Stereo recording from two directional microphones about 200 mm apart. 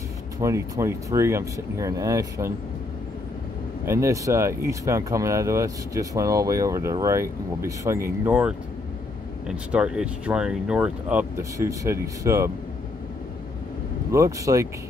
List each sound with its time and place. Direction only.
0.4 s speech: 15° right (ahead or behind)
3.8 s speech: 15° right (ahead or behind)
9.7 s speech: 5° right (ahead or behind)
14.1 s speech: 15° right (ahead or behind)